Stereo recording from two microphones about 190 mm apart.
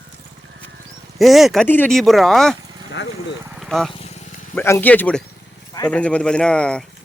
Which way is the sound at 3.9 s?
35° left (ahead or behind).